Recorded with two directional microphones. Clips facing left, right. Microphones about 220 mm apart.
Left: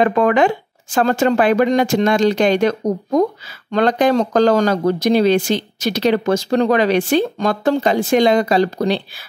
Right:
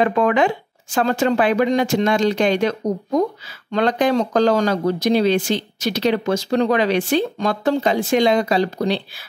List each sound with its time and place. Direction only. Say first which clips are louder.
0.0 s speech: left 3 dB; 50° left (ahead or behind)